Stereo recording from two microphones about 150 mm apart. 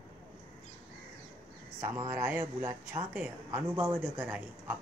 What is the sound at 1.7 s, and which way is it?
Speech, 15° right (ahead or behind).